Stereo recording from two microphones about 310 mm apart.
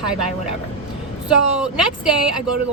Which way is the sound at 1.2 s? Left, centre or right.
Centre.